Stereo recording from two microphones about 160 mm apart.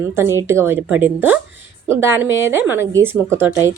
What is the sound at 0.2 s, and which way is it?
Speech, 15° right (ahead or behind).